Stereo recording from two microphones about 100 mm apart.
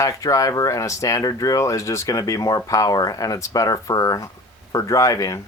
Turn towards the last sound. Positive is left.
turn(degrees=35)  # may be behind; listen again after turning